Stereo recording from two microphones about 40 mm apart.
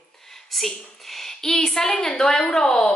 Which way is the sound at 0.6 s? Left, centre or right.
Centre.